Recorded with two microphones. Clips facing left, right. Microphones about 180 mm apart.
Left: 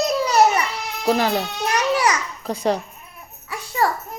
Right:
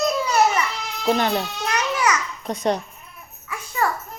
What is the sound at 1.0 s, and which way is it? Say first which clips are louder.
Babbling: left 1 dB; 35° left (ahead or behind).